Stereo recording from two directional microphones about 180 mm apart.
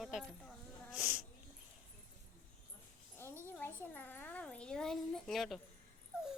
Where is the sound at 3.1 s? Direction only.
10° left (ahead or behind).